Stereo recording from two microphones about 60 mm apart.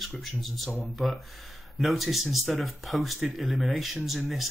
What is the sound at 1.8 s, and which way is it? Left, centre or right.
Speech, centre.